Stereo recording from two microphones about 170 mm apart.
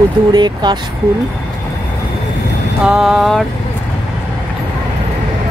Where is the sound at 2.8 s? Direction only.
Centre (ahead or behind).